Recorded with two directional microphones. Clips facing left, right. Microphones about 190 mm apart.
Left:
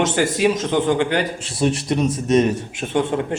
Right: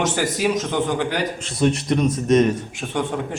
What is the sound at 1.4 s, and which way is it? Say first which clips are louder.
A man's voice: even; 10° left (ahead or behind).